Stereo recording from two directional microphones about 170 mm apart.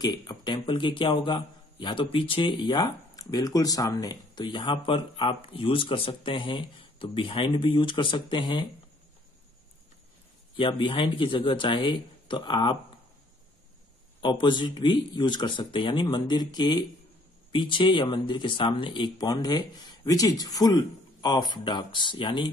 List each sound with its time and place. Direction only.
0.0 s a man's voice: 25° left (ahead or behind)
10.5 s a man's voice: 30° left (ahead or behind)
14.2 s a man's voice: 25° left (ahead or behind)